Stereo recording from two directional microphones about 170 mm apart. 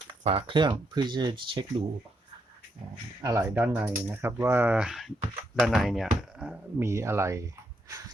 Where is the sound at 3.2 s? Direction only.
15° right (ahead or behind).